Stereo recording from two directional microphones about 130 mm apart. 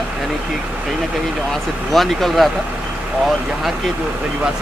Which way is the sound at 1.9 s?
Centre (ahead or behind).